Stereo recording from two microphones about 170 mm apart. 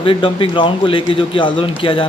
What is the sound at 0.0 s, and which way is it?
A man's voice, 30° left (ahead or behind).